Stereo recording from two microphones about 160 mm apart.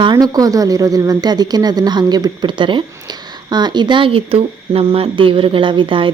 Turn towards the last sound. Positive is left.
turn(degrees=-30)  # may be behind; listen again after turning